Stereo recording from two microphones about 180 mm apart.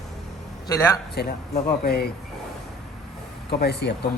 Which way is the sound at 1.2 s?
60° left (ahead or behind).